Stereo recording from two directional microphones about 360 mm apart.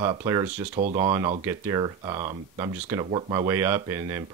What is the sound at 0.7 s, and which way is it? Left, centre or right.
Speech, right.